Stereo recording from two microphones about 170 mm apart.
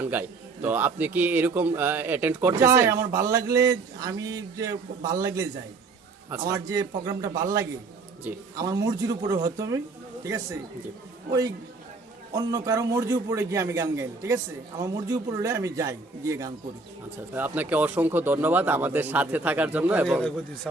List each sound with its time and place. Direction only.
0.0 s a man's voice: 10° right (ahead or behind)
6.5 s a man's voice: 20° right (ahead or behind)
12.3 s a man's voice: 20° right (ahead or behind)